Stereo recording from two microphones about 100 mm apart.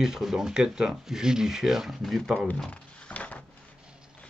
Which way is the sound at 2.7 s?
15° left (ahead or behind).